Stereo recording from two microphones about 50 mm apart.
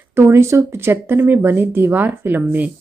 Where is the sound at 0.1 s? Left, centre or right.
Right.